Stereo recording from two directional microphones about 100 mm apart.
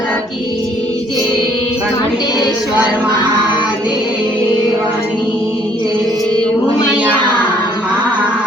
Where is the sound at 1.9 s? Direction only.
45° left (ahead or behind).